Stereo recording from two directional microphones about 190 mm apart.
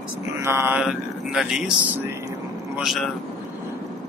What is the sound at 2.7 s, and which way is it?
Speech, centre (ahead or behind).